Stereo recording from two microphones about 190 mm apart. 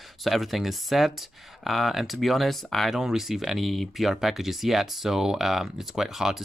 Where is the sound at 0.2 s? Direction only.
Centre (ahead or behind).